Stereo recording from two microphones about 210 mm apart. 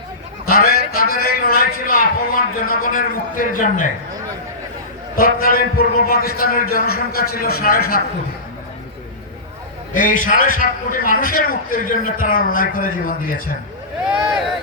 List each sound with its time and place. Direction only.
0.4 s a man's voice: 45° left (ahead or behind)
5.1 s a man's voice: 45° left (ahead or behind)
9.9 s a man's voice: 40° left (ahead or behind)
14.0 s speech: 5° right (ahead or behind)